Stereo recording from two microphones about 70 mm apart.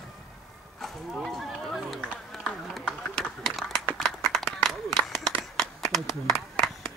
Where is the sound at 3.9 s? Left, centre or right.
Centre.